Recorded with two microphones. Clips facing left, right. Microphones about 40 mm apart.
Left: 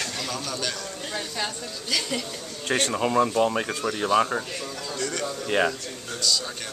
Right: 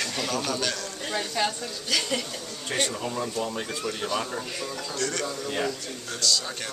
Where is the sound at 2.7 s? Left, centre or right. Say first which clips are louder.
Left 6 dB; left.